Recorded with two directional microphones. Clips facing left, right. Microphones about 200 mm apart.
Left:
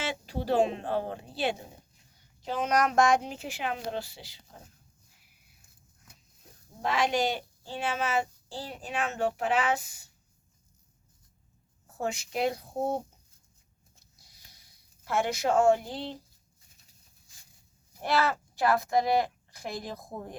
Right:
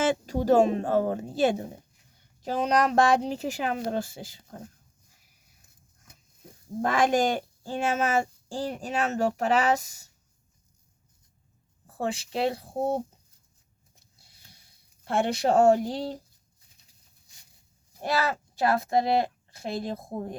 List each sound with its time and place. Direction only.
0.0 s speech: 45° right (ahead or behind)
6.8 s speech: 50° right (ahead or behind)
11.9 s speech: 30° right (ahead or behind)
15.0 s speech: 30° right (ahead or behind)
18.2 s speech: 20° right (ahead or behind)